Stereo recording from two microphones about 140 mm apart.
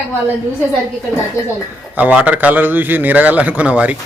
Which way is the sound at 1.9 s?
10° right (ahead or behind).